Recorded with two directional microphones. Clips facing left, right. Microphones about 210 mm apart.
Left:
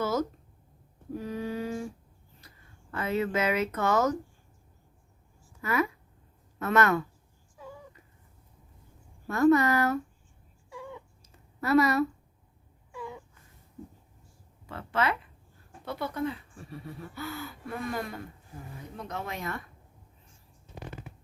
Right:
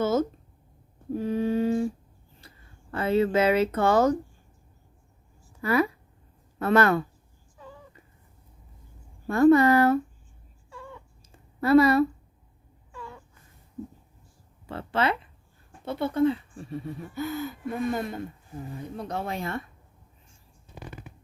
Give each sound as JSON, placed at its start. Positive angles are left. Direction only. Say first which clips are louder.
{"t": 0.0, "sound": "a sound", "louder": "right 5 dB", "side_deg": -25}
{"t": 2.9, "sound": "speech", "louder": "right 6 dB", "side_deg": -30}
{"t": 5.6, "sound": "speech", "louder": "right 5 dB", "side_deg": -35}
{"t": 7.6, "sound": "a sound", "louder": "left 1 dB", "side_deg": 10}
{"t": 9.2, "sound": "speech", "louder": "right 4 dB", "side_deg": -30}
{"t": 10.7, "sound": "cat", "louder": "left 2 dB", "side_deg": 15}
{"t": 11.3, "sound": "a sound", "louder": "right 6 dB", "side_deg": -30}
{"t": 12.9, "sound": "wail", "louder": "left 3 dB", "side_deg": 15}
{"t": 14.7, "sound": "speech", "louder": "right 3 dB", "side_deg": -30}